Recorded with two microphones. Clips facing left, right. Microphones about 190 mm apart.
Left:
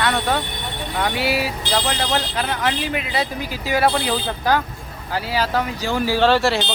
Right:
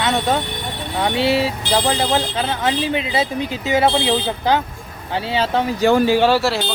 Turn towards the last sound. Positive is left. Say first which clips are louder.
# right 1 dB
turn(degrees=-5)  # may be behind; listen again after turning